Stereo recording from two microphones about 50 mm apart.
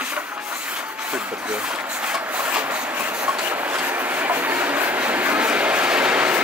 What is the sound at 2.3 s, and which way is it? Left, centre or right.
Rub, right.